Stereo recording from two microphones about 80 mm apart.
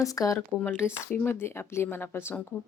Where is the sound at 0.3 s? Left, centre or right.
Left.